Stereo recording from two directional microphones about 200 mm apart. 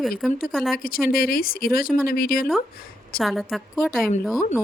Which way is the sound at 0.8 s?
45° left (ahead or behind).